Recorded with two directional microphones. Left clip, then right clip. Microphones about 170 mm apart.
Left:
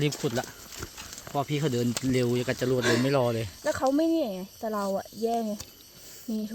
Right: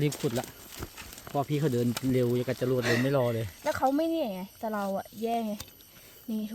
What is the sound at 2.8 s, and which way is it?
Speech, 45° left (ahead or behind).